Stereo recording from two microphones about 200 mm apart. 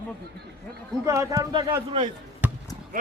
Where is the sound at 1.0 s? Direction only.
15° right (ahead or behind).